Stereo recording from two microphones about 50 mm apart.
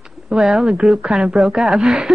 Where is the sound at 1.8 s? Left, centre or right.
Centre.